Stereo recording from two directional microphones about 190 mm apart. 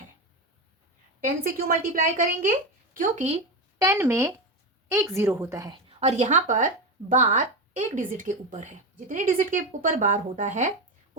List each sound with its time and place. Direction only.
1.2 s a woman's voice: 50° right (ahead or behind)
3.8 s a woman's voice: 15° right (ahead or behind)
5.9 s a woman's voice: 35° right (ahead or behind)